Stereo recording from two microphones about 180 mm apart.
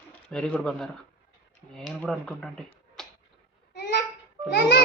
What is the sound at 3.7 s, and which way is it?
Babbling, 65° left (ahead or behind).